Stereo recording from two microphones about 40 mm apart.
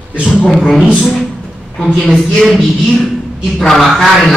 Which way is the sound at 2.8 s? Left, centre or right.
Centre.